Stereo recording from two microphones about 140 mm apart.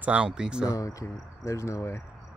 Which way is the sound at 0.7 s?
25° left (ahead or behind).